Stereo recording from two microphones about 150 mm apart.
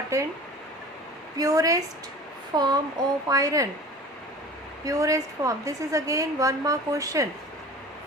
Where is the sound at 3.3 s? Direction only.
25° right (ahead or behind).